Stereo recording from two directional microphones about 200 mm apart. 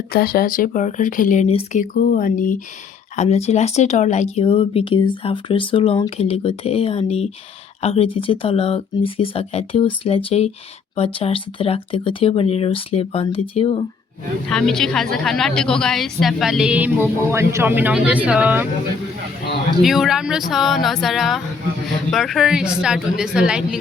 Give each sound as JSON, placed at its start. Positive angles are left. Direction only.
{"t": 0.1, "sound": "speech", "side_deg": 50}
{"t": 14.5, "sound": "a woman's voice", "side_deg": 5}
{"t": 19.8, "sound": "a woman's voice", "side_deg": 0}